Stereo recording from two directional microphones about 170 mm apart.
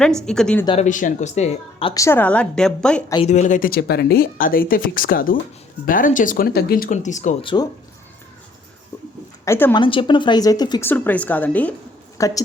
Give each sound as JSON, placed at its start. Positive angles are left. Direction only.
{"t": 0.3, "sound": "a woman's voice", "side_deg": 5}
{"t": 0.8, "sound": "speech", "side_deg": 50}
{"t": 1.9, "sound": "speech", "side_deg": 15}
{"t": 3.2, "sound": "speech", "side_deg": 45}
{"t": 7.4, "sound": "a woman's voice", "side_deg": 25}
{"t": 9.4, "sound": "a woman's voice", "side_deg": 15}
{"t": 9.7, "sound": "a woman's voice", "side_deg": 30}
{"t": 10.8, "sound": "speech", "side_deg": 10}